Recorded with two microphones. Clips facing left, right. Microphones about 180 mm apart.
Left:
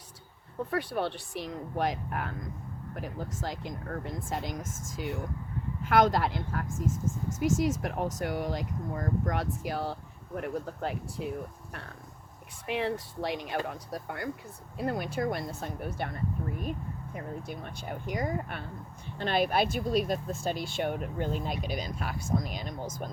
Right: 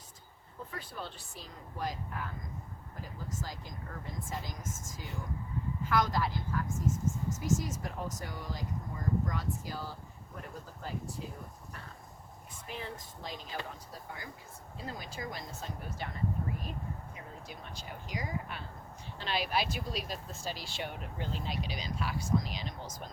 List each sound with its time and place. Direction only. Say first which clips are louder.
0.7 s speech: left 13 dB; 70° left (ahead or behind)
12.6 s speech: left 12 dB; 70° left (ahead or behind)
17.2 s speech: left 9 dB; 55° left (ahead or behind)